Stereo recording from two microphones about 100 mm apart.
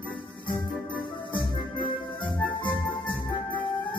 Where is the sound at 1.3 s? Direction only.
55° left (ahead or behind).